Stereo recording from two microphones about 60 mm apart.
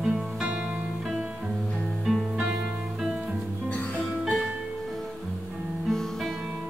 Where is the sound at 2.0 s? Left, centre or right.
Centre.